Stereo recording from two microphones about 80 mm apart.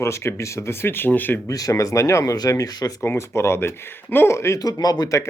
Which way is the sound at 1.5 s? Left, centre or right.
Left.